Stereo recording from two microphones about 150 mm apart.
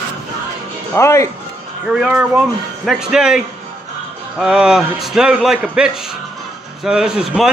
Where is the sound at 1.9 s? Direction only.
5° right (ahead or behind).